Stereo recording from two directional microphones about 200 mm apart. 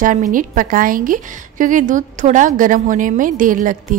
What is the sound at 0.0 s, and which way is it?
A woman's voice, 40° right (ahead or behind).